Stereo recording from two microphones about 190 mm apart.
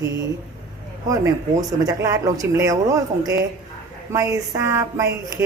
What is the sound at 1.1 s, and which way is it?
Speech, 20° right (ahead or behind).